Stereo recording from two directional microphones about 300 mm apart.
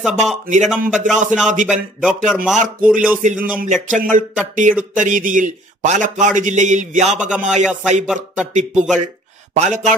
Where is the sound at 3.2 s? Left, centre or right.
Right.